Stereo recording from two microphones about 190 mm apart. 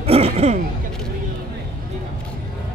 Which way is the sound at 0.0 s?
30° right (ahead or behind).